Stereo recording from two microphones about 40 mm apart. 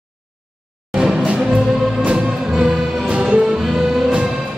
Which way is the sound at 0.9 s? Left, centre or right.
Right.